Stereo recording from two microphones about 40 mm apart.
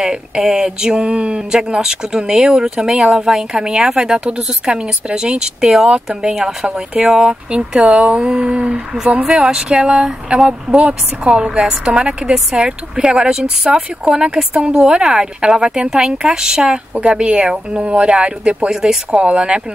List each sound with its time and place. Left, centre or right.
0.0 s a woman's voice: centre
7.8 s a woman's voice: right
18.7 s a woman's voice: centre